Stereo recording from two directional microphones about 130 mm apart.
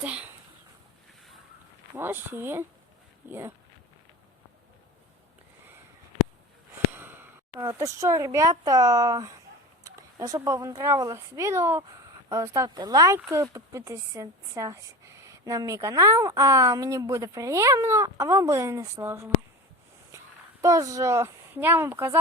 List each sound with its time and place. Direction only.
0.0 s speech: 10° right (ahead or behind)
2.0 s speech: 15° right (ahead or behind)
6.7 s speech: 15° right (ahead or behind)
20.1 s a sound: 20° right (ahead or behind)
20.6 s speech: 25° right (ahead or behind)